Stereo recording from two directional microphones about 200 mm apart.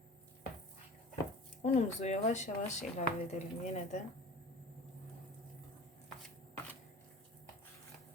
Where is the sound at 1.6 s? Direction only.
35° left (ahead or behind).